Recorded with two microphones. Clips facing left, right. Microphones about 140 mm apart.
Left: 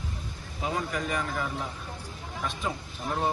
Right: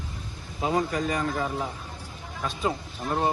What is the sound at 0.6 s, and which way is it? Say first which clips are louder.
Speech: right 5 dB; 40° right (ahead or behind).